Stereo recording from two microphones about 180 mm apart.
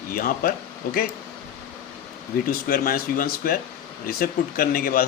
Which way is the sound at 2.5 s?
55° left (ahead or behind).